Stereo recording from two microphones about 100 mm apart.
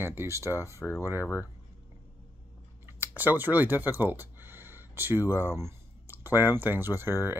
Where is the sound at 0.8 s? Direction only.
30° left (ahead or behind).